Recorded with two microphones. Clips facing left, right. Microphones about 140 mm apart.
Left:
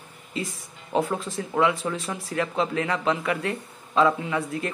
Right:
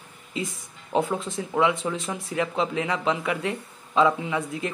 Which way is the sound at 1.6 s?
20° right (ahead or behind).